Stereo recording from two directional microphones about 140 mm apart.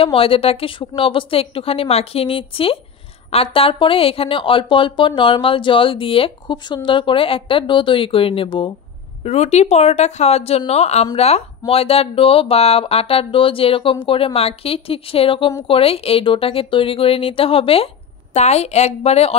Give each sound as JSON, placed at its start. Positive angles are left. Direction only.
{"t": 0.0, "sound": "a woman's voice", "side_deg": 40}
{"t": 9.2, "sound": "a woman's voice", "side_deg": 50}